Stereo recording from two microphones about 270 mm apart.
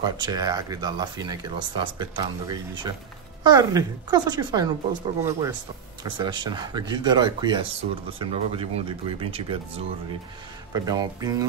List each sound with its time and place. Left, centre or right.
0.0 s speech: centre
10.7 s speech: centre